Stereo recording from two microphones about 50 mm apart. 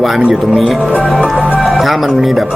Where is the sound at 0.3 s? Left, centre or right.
Centre.